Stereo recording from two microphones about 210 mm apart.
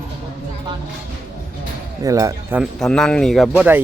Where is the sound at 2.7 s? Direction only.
Centre (ahead or behind).